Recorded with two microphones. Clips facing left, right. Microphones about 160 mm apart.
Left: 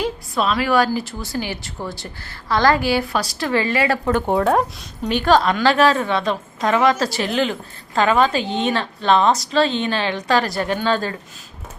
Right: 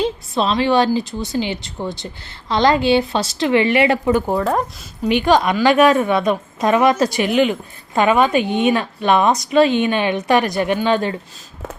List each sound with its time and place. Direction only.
0.0 s a woman's voice: 25° right (ahead or behind)
4.0 s speech: 5° right (ahead or behind)
5.0 s a woman's voice: 15° right (ahead or behind)